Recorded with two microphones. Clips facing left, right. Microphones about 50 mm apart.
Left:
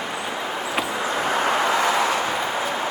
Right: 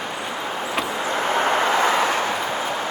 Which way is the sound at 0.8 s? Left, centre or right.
Centre.